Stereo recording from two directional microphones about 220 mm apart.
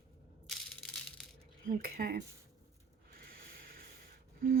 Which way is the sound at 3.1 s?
40° right (ahead or behind).